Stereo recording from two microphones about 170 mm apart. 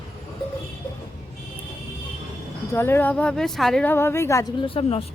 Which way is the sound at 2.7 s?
15° left (ahead or behind).